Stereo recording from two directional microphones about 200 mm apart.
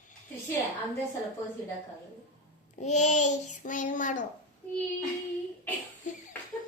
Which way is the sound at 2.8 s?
35° left (ahead or behind).